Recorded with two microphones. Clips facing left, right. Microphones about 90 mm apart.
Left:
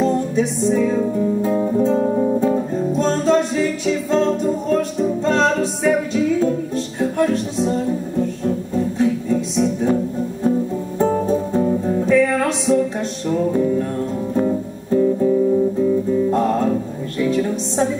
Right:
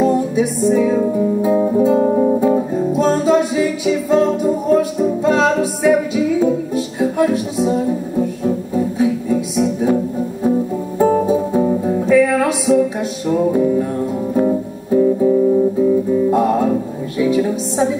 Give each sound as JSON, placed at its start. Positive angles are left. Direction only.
{"t": 0.0, "sound": "music", "side_deg": -5}